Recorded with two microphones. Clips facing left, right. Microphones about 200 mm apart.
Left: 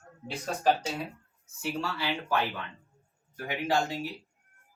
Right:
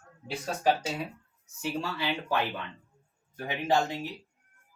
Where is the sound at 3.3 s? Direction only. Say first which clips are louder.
Right 2 dB; 25° right (ahead or behind).